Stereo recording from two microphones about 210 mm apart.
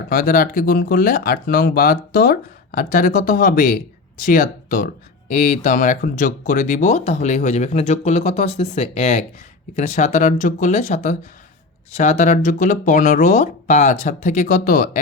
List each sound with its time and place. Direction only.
0.1 s speech: 40° left (ahead or behind)